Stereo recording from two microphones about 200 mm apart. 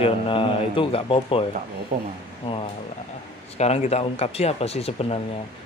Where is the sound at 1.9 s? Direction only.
40° right (ahead or behind).